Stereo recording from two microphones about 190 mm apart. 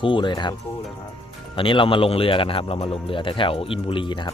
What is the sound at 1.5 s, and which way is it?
Speech, 25° left (ahead or behind).